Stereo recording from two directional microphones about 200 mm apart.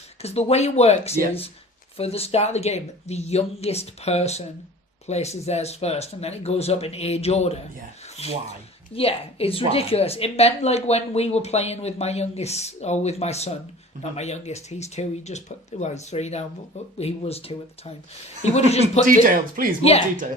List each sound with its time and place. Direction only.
0.2 s a woman's voice: 30° left (ahead or behind)
19.2 s speech: 45° right (ahead or behind)